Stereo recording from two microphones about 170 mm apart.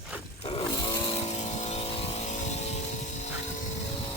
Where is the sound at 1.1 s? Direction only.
40° left (ahead or behind).